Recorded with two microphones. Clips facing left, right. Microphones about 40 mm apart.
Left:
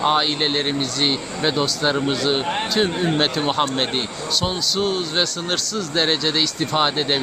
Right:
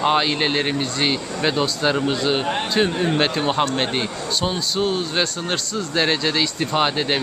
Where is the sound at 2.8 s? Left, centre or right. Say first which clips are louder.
Right 1 dB; centre.